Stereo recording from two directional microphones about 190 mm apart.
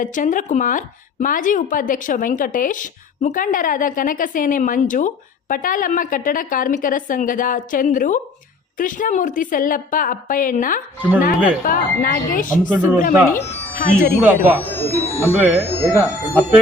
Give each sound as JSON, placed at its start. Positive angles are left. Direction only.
{"t": 0.0, "sound": "speech", "side_deg": 45}
{"t": 12.7, "sound": "speech", "side_deg": -10}
{"t": 13.0, "sound": "speech", "side_deg": 45}
{"t": 14.6, "sound": "speech", "side_deg": 10}
{"t": 15.0, "sound": "speech", "side_deg": -10}